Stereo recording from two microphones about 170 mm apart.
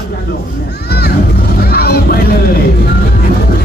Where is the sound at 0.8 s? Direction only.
70° left (ahead or behind).